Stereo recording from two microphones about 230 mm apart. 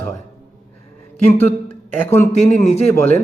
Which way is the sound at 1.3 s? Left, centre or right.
Centre.